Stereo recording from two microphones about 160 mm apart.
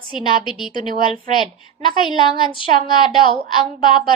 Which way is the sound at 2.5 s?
30° left (ahead or behind).